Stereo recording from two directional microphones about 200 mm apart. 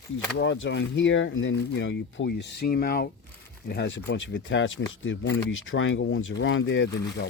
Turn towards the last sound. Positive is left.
turn(degrees=60)  # may be behind; listen again after turning